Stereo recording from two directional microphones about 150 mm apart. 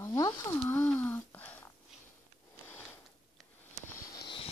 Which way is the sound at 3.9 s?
25° left (ahead or behind).